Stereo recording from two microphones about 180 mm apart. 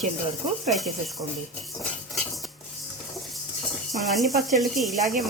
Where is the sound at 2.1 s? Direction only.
Centre (ahead or behind).